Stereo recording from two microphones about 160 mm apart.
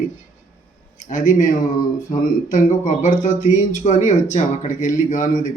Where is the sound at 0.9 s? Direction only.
50° left (ahead or behind).